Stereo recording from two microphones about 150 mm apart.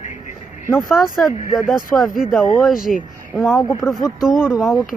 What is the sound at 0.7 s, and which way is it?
Speech, centre (ahead or behind).